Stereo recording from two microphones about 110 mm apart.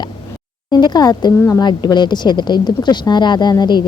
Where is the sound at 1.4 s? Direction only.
30° left (ahead or behind).